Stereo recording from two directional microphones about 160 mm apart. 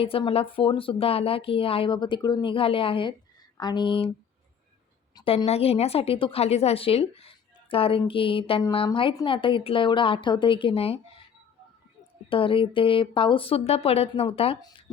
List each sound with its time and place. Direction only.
0.0 s a woman's voice: 35° left (ahead or behind)
5.1 s a woman's voice: 30° left (ahead or behind)
12.3 s a woman's voice: 35° left (ahead or behind)